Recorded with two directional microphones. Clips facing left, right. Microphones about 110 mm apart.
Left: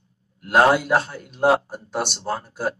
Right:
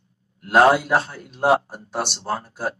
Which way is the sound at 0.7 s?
30° right (ahead or behind).